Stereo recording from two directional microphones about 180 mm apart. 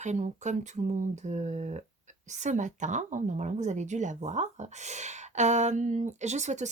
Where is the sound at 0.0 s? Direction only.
40° right (ahead or behind).